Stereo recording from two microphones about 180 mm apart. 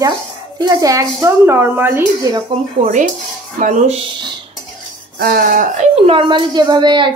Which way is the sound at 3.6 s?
40° right (ahead or behind).